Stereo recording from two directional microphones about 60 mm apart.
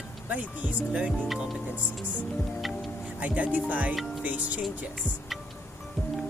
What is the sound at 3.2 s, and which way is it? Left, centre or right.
Speech, right.